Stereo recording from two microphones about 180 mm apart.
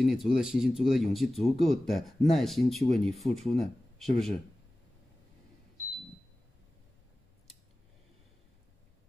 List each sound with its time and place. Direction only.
0.0 s speech: centre (ahead or behind)